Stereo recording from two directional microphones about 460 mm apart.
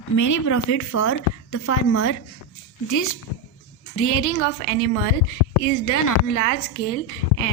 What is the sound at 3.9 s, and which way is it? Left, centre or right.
Speech, left.